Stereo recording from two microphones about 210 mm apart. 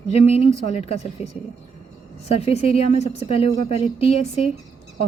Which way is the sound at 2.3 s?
30° left (ahead or behind).